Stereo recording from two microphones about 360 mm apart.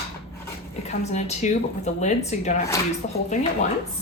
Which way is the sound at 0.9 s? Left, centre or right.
Centre.